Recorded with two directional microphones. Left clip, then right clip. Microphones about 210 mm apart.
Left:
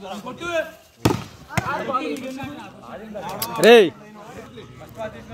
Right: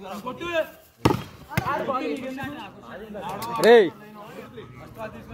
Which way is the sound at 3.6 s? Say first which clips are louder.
Left 3 dB; 50° left (ahead or behind).